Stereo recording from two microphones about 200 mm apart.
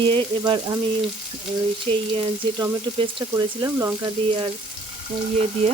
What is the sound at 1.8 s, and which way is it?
Frying, 25° right (ahead or behind).